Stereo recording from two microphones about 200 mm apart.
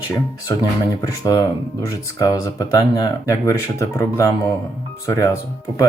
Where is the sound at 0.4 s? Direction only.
15° left (ahead or behind).